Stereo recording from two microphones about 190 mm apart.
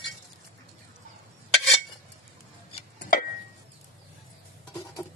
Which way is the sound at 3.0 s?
50° left (ahead or behind).